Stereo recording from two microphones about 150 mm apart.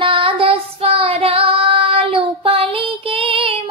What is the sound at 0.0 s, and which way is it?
Child singing, 35° right (ahead or behind).